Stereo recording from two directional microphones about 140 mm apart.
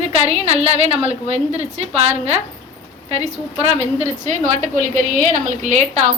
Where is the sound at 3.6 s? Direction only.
50° right (ahead or behind).